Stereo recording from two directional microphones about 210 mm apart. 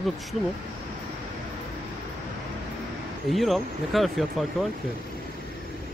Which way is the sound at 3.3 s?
Centre (ahead or behind).